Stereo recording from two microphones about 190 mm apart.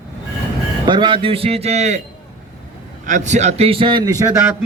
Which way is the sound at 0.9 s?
25° right (ahead or behind).